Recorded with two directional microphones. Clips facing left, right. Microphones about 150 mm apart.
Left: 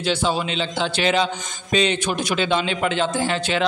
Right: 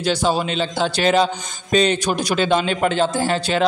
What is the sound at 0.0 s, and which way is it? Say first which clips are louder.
A man's voice: right 3 dB; 40° right (ahead or behind).